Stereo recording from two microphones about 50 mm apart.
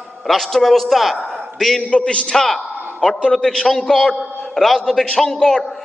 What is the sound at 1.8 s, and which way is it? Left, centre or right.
A man's voice, left.